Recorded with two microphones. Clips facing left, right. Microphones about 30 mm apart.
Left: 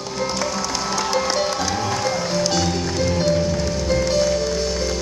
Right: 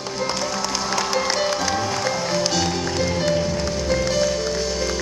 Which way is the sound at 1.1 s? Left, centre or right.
Centre.